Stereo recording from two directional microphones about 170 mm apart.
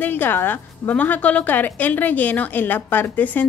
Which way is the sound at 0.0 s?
10° left (ahead or behind).